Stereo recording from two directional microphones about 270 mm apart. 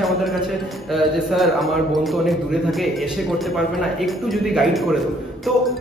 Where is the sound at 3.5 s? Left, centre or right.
Centre.